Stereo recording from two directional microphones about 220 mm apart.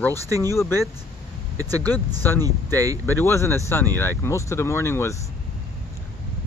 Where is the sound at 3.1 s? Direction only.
10° left (ahead or behind).